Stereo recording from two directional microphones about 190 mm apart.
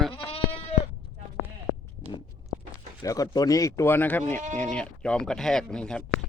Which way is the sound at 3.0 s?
20° left (ahead or behind).